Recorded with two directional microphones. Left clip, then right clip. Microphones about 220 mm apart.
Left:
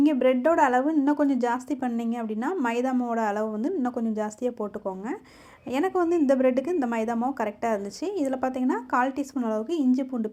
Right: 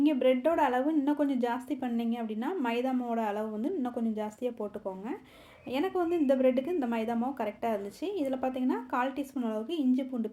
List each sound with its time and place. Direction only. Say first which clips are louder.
0.0 s a woman's voice: left 4 dB; 20° left (ahead or behind)